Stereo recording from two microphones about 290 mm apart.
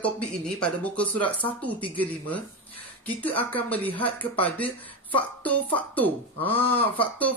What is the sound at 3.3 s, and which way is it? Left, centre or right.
Speech, centre.